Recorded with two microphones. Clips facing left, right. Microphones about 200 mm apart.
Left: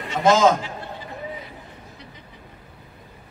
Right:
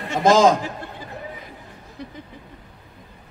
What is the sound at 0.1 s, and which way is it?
Speech, 40° right (ahead or behind).